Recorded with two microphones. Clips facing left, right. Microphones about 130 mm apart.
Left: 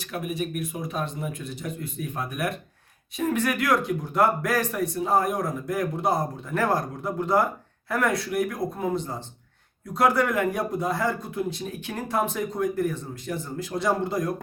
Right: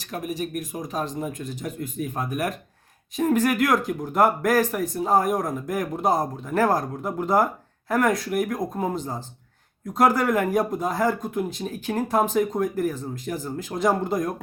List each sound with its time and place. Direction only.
0.0 s speech: 40° right (ahead or behind)
10.0 s speech: 40° right (ahead or behind)